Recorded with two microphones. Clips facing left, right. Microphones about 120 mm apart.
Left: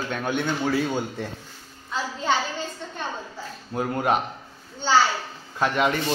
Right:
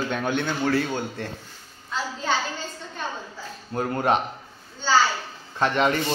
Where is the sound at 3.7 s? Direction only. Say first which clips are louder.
Right 1 dB; 5° left (ahead or behind).